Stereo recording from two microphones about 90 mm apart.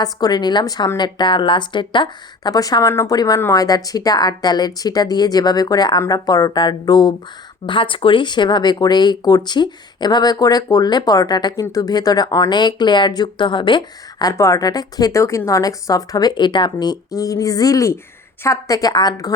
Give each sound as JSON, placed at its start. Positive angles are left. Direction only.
{"t": 0.0, "sound": "speech", "side_deg": 45}
{"t": 2.5, "sound": "speech", "side_deg": 45}
{"t": 7.7, "sound": "speech", "side_deg": 70}
{"t": 14.3, "sound": "speech", "side_deg": 40}